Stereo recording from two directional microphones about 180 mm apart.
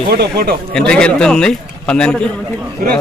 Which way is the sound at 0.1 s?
60° right (ahead or behind).